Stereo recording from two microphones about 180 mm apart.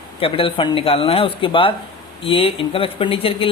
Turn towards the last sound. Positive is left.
turn(degrees=30)  # may be behind; listen again after turning